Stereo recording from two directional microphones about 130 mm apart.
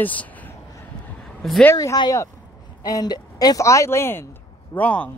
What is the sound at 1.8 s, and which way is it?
Speech, 30° left (ahead or behind).